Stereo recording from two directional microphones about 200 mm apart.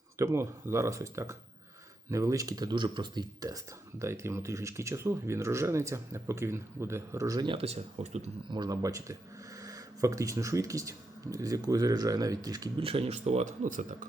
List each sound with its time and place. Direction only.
0.2 s speech: 15° right (ahead or behind); by 8.5 s 35° right (ahead or behind)
8.5 s speech: 20° right (ahead or behind); by 14.1 s 40° right (ahead or behind)